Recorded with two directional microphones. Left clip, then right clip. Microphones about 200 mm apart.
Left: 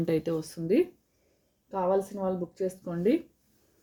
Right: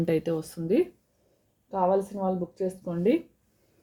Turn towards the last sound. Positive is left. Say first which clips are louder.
# right 2 dB
turn(degrees=-5)  # may be behind; listen again after turning